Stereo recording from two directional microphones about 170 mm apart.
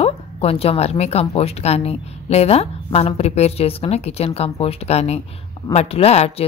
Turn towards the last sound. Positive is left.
turn(degrees=40)  # may be behind; listen again after turning